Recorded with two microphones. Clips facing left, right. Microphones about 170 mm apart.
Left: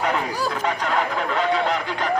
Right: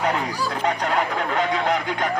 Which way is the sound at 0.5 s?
40° right (ahead or behind).